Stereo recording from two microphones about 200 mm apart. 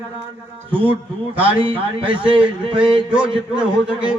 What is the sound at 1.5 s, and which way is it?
A man's voice, 25° right (ahead or behind).